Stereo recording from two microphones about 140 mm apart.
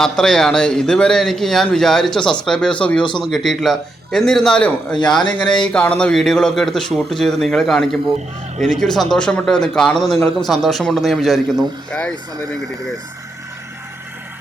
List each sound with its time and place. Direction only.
0.0 s a man's voice: 5° left (ahead or behind)
3.0 s speech: 35° left (ahead or behind)
3.2 s a man's voice: centre (ahead or behind)